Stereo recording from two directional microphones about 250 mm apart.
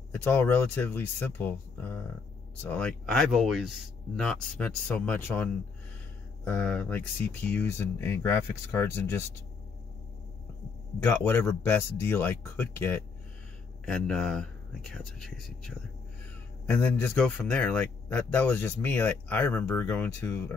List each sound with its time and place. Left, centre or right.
0.1 s a man's voice: centre
11.2 s a man's voice: centre